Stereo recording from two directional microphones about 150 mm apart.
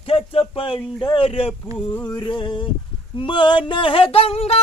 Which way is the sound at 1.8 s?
10° left (ahead or behind).